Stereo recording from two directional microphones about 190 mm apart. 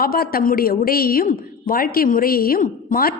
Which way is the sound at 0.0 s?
50° left (ahead or behind).